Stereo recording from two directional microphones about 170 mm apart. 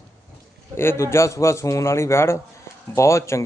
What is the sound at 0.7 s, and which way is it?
A man's voice, 15° left (ahead or behind).